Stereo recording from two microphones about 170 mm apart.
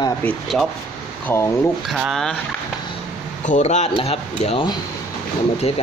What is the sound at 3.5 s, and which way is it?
Speech, 45° left (ahead or behind).